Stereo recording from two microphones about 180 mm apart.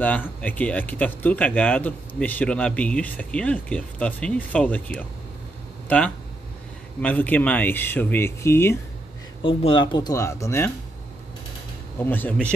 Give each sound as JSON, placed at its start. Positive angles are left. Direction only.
{"t": 0.0, "sound": "speech", "side_deg": 10}
{"t": 9.4, "sound": "speech", "side_deg": 30}
{"t": 12.0, "sound": "speech", "side_deg": 10}